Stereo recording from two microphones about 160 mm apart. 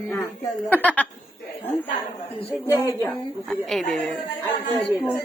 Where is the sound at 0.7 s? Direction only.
10° left (ahead or behind).